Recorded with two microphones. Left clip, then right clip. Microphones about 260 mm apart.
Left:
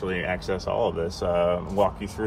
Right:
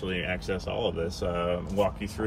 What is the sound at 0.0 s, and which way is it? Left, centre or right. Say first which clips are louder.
Speech: left 4 dB; centre.